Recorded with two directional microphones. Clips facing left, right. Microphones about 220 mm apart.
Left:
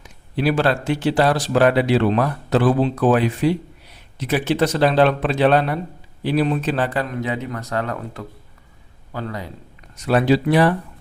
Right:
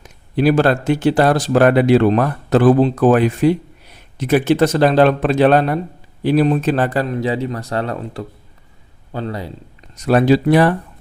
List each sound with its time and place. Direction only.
0.0 s a man's voice: 45° right (ahead or behind)